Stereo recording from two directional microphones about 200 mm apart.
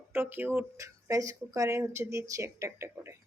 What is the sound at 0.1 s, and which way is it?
Speech, 10° right (ahead or behind).